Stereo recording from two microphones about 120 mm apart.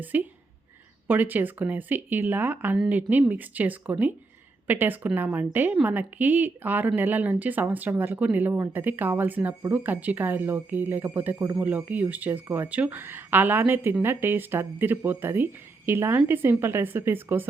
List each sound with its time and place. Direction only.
0.1 s speech: 15° right (ahead or behind)